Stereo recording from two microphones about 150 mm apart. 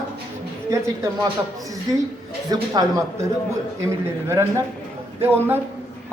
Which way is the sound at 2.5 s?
25° right (ahead or behind).